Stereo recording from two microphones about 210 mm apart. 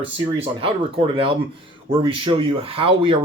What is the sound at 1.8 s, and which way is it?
Speech, 25° right (ahead or behind).